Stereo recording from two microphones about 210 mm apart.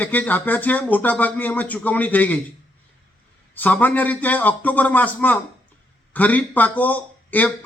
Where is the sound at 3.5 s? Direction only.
10° left (ahead or behind).